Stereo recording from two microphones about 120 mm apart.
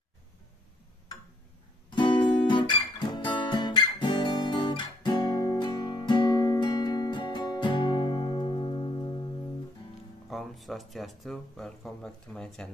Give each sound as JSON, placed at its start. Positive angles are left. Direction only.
{"t": 1.9, "sound": "guitar", "side_deg": 40}
{"t": 10.3, "sound": "speech", "side_deg": 0}